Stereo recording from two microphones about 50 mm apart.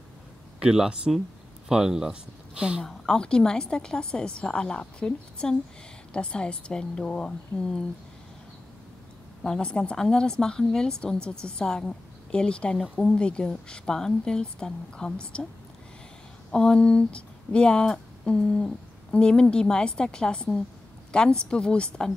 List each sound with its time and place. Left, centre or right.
0.6 s speech: centre
2.8 s speech: centre
9.6 s speech: left
16.5 s speech: centre